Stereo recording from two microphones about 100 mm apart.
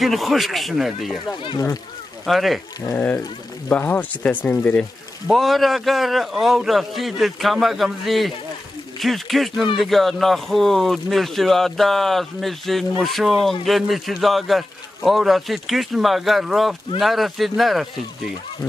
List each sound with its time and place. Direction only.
0.0 s a man's voice: centre (ahead or behind)
2.2 s a man's voice: centre (ahead or behind)
3.0 s speech: 20° left (ahead or behind)
5.3 s a man's voice: centre (ahead or behind)